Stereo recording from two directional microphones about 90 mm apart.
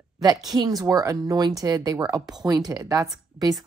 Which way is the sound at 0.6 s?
45° right (ahead or behind).